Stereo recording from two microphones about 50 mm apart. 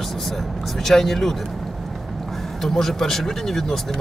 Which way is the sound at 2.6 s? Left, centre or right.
Centre.